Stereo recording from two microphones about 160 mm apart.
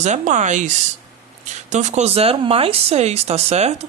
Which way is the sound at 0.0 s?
50° right (ahead or behind).